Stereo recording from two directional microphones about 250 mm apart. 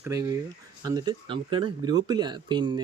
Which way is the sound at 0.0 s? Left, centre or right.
Centre.